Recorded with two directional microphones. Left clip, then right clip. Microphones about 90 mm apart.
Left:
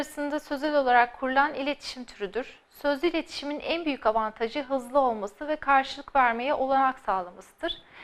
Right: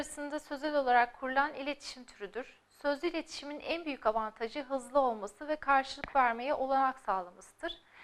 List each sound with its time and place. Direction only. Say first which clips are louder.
0.0 s a woman's voice: left 8 dB; 30° left (ahead or behind)